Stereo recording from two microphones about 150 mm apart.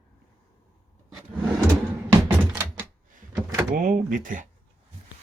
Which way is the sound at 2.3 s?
10° right (ahead or behind).